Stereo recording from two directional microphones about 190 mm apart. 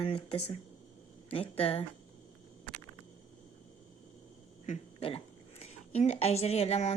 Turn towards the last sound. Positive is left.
turn(degrees=35)  # may be behind; listen again after turning